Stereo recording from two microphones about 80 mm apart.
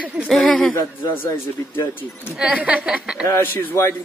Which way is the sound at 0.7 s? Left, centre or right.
Left.